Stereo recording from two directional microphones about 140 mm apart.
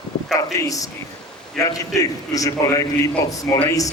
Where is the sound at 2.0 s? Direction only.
25° left (ahead or behind).